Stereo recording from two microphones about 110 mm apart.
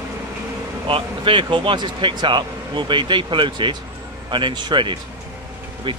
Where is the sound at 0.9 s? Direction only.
50° right (ahead or behind).